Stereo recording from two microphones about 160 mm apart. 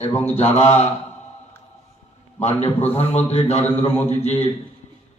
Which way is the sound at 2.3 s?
45° left (ahead or behind).